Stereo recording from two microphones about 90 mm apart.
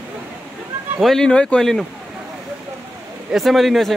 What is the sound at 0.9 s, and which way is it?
Speech, 5° left (ahead or behind).